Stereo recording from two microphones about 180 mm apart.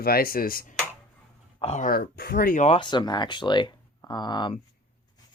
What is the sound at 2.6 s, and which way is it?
Speech, 30° left (ahead or behind).